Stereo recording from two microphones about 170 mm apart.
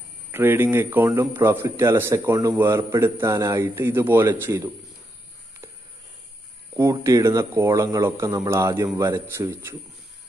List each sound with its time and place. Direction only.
0.3 s speech: 10° right (ahead or behind)
6.8 s speech: 20° right (ahead or behind)